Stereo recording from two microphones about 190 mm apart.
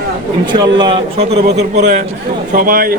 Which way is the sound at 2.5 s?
50° right (ahead or behind).